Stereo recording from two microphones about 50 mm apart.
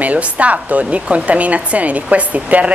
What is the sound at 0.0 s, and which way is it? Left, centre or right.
Speech, right.